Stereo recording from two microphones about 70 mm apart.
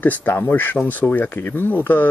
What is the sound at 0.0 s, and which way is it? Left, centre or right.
Speech, left.